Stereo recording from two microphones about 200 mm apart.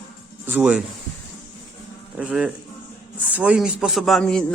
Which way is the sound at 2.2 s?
5° right (ahead or behind).